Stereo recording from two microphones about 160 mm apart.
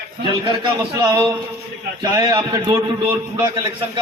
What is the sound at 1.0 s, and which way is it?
Speech, 25° right (ahead or behind).